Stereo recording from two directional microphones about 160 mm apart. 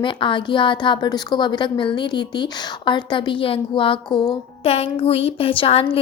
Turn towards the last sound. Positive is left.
turn(degrees=35)  # may be behind; listen again after turning